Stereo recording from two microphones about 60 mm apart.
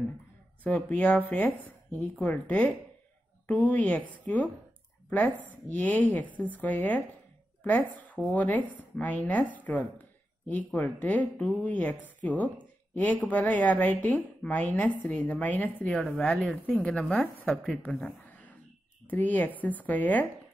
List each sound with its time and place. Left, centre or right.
0.7 s speech: left
2.1 s speech: centre
16.1 s a woman's voice: centre
16.8 s a woman's voice: centre
18.3 s a sound: left
19.0 s speech: left